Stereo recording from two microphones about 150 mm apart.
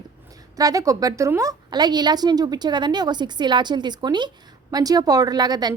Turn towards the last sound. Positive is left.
turn(degrees=-25)  # may be behind; listen again after turning